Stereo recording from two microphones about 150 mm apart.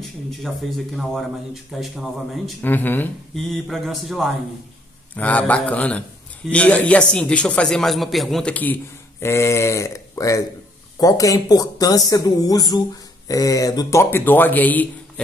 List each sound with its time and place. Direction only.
0.0 s speech: centre (ahead or behind)
2.6 s a man's voice: 10° left (ahead or behind)
3.4 s a man's voice: centre (ahead or behind)